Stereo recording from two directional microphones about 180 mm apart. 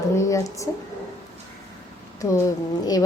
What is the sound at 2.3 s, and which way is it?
Speech, 20° left (ahead or behind).